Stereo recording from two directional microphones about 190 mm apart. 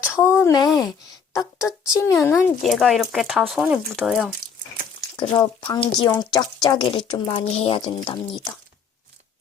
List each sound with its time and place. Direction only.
0.1 s speech: 15° left (ahead or behind)
2.6 s speech: centre (ahead or behind)
5.1 s speech: 25° left (ahead or behind)